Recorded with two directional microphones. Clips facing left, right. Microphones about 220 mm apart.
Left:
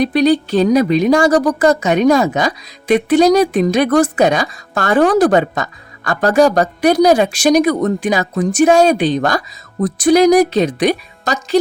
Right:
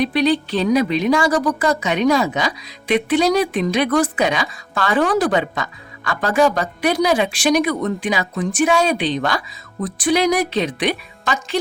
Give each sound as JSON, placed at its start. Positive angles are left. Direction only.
{"t": 0.0, "sound": "a woman's voice", "side_deg": 45}